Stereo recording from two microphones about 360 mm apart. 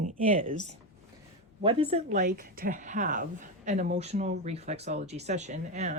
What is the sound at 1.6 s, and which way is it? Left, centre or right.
A woman's voice, centre.